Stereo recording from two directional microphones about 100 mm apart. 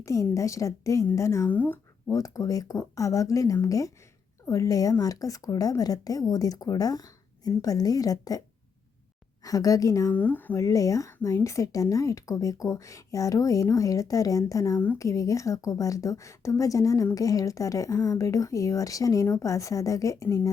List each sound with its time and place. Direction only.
0.0 s a woman's voice: 30° left (ahead or behind)
1.5 s speech: 15° left (ahead or behind)
2.1 s a woman's voice: 35° left (ahead or behind)
9.4 s a woman's voice: 35° left (ahead or behind)
10.1 s speech: 15° left (ahead or behind)
10.5 s a woman's voice: 35° left (ahead or behind)